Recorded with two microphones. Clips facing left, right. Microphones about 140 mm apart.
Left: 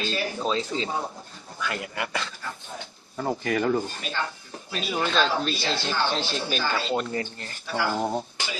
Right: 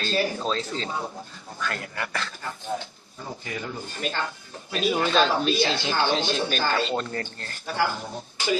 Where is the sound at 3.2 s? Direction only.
65° left (ahead or behind).